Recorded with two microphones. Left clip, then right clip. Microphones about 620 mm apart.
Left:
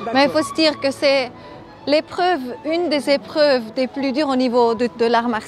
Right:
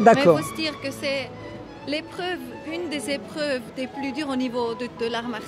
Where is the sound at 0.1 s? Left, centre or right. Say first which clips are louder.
Left 1 dB; left.